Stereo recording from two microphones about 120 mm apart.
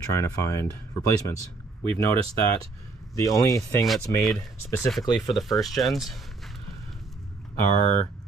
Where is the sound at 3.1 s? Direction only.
25° left (ahead or behind).